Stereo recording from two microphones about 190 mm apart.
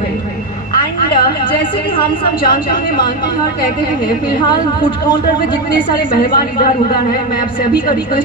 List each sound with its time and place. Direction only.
2.4 s a man's voice: 50° left (ahead or behind)
4.4 s a woman's voice: 25° left (ahead or behind)
6.3 s a man's voice: 50° left (ahead or behind)